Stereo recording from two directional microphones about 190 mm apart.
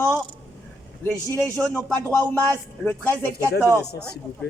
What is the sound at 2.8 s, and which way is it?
Speech, 10° left (ahead or behind).